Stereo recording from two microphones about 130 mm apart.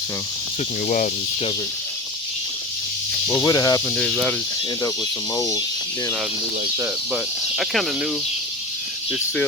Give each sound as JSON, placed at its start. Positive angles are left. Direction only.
{"t": 3.3, "sound": "speech", "side_deg": 25}
{"t": 3.8, "sound": "speech", "side_deg": 5}
{"t": 5.3, "sound": "speech", "side_deg": 25}
{"t": 7.1, "sound": "speech", "side_deg": -5}